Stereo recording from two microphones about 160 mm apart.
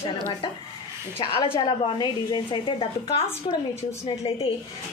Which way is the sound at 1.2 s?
30° left (ahead or behind).